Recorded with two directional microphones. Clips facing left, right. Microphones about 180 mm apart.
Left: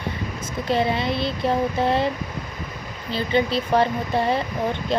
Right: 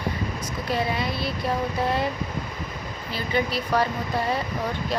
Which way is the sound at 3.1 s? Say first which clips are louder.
Left 5 dB; 25° left (ahead or behind).